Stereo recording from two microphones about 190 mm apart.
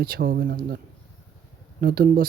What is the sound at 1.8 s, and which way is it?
Speech, 50° right (ahead or behind).